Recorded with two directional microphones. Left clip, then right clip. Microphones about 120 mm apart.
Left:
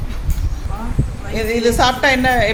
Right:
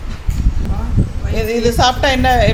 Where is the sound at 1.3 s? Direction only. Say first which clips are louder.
Even; 15° right (ahead or behind).